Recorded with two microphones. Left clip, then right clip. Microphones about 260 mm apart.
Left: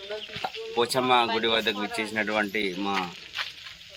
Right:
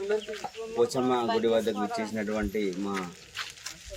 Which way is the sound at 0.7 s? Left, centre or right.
Centre.